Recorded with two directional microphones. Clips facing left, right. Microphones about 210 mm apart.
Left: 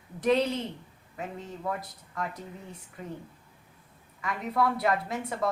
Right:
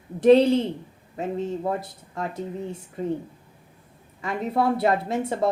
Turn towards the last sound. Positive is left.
turn(degrees=-25)  # may be behind; listen again after turning